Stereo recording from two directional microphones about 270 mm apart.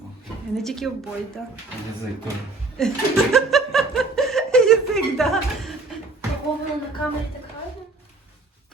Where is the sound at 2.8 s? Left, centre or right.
Centre.